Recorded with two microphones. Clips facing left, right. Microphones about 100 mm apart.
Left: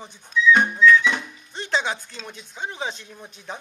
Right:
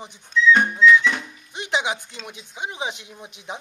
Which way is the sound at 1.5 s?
15° right (ahead or behind).